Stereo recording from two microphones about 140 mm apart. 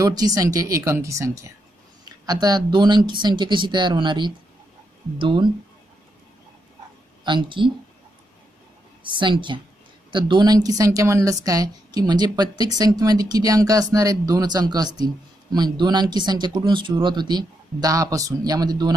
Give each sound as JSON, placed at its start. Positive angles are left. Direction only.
{"t": 0.0, "sound": "a woman's voice", "side_deg": -25}
{"t": 7.2, "sound": "speech", "side_deg": -35}
{"t": 9.0, "sound": "a woman's voice", "side_deg": -35}